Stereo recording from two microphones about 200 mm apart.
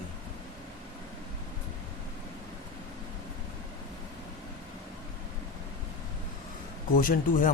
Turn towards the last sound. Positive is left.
turn(degrees=45)  # may be behind; listen again after turning